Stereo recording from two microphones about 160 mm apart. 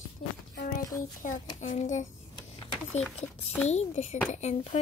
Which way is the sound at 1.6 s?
50° left (ahead or behind).